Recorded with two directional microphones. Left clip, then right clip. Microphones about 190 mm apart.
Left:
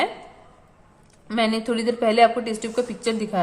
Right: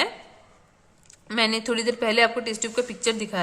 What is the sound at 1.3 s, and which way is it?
A woman's voice, 25° right (ahead or behind).